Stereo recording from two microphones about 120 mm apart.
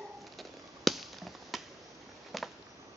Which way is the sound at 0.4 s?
Centre (ahead or behind).